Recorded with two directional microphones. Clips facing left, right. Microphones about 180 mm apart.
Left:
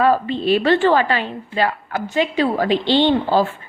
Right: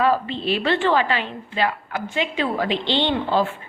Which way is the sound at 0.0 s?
45° left (ahead or behind).